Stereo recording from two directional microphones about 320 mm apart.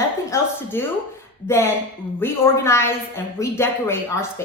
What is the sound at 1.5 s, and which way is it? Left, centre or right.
A woman's voice, centre.